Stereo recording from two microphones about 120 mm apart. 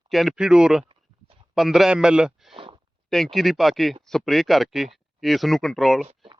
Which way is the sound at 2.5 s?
45° right (ahead or behind).